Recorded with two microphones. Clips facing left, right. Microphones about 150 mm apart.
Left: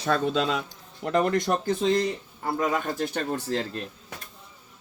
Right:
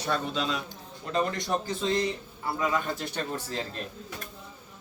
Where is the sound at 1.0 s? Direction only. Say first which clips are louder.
Left 6 dB; 60° left (ahead or behind).